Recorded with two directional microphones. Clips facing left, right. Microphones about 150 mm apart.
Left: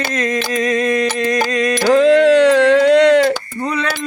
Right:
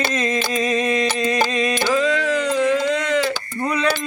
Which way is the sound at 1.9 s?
65° left (ahead or behind).